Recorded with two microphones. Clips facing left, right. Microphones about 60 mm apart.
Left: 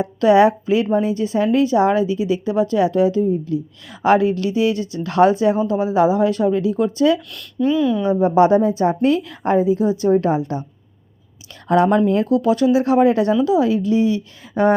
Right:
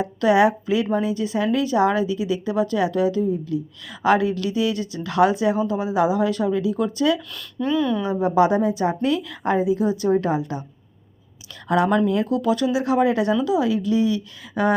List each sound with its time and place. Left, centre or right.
0.2 s a woman's voice: left
7.3 s speech: centre
8.2 s speech: left
9.7 s a woman's voice: right
10.2 s speech: left
11.7 s speech: left